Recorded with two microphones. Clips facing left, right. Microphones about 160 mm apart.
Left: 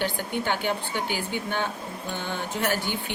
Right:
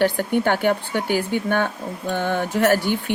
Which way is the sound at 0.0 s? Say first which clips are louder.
Right 9 dB; 55° right (ahead or behind).